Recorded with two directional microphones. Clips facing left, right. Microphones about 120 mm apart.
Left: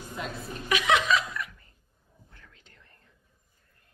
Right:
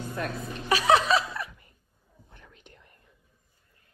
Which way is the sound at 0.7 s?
35° right (ahead or behind).